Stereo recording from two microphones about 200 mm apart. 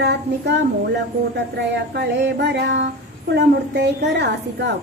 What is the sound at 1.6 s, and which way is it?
A woman's voice, 60° right (ahead or behind).